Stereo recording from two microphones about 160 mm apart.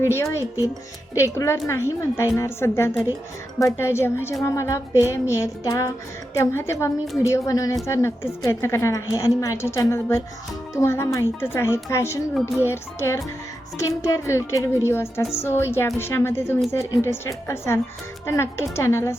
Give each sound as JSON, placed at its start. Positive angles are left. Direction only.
{"t": 0.0, "sound": "a woman's voice", "side_deg": 15}